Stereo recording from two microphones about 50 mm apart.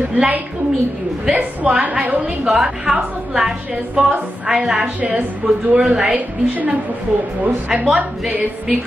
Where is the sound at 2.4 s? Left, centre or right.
Centre.